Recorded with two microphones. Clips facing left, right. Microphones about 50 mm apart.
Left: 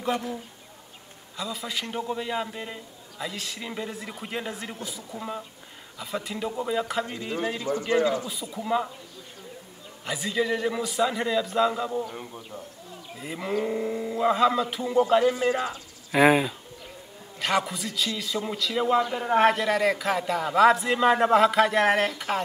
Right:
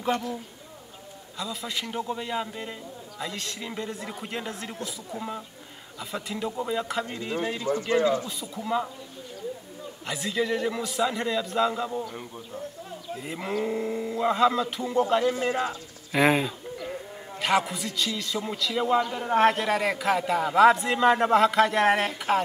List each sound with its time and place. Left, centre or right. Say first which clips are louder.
0.1 s a man's voice: right 1 dB; centre
1.4 s a man's voice: left 1 dB; centre
5.1 s speech: right 2 dB; right
5.9 s a man's voice: left 1 dB; centre
10.0 s a man's voice: left 1 dB; centre
13.2 s a man's voice: left 2 dB; centre
19.5 s a man's voice: left 2 dB; centre